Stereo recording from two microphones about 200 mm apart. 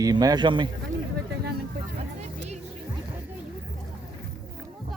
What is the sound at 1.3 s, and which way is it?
Vehicle, 55° right (ahead or behind).